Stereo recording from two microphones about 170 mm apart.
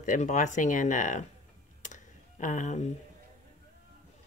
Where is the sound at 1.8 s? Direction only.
50° left (ahead or behind).